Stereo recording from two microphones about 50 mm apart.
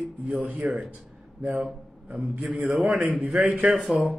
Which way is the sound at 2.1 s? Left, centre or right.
Right.